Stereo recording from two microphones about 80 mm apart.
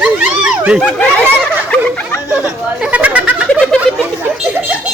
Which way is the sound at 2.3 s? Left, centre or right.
Centre.